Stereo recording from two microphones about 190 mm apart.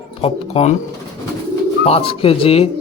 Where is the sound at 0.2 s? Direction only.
35° left (ahead or behind).